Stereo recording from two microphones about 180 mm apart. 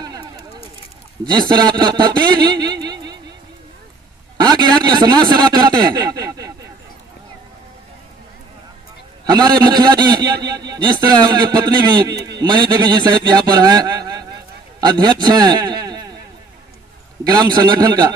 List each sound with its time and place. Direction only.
1.3 s a man's voice: 25° right (ahead or behind)
4.4 s speech: 20° right (ahead or behind)
9.2 s a man's voice: 25° right (ahead or behind)
14.8 s a sound: 25° right (ahead or behind)
17.2 s a man's voice: 20° right (ahead or behind)